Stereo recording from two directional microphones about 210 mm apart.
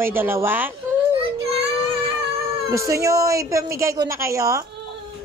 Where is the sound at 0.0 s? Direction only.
10° right (ahead or behind).